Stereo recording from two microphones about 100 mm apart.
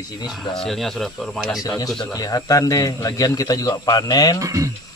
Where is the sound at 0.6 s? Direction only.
5° left (ahead or behind).